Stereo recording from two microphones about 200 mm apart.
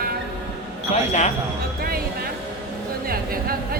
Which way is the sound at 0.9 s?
35° left (ahead or behind).